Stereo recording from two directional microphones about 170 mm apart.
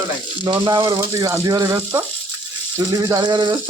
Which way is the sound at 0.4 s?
25° right (ahead or behind).